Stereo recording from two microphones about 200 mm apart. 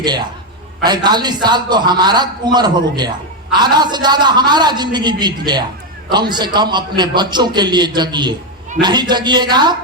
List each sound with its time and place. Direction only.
0.9 s a man's voice: 20° right (ahead or behind)